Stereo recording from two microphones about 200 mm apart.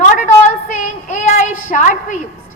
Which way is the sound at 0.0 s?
40° left (ahead or behind).